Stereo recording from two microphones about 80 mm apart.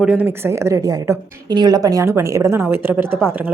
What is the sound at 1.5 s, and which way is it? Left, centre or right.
A woman's voice, right.